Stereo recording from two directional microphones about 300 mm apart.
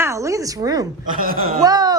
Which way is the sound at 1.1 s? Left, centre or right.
Right.